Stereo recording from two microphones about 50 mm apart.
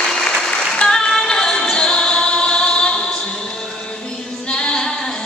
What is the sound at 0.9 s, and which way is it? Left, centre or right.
Music, centre.